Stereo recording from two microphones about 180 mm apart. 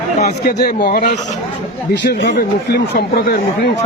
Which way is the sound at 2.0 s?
75° left (ahead or behind).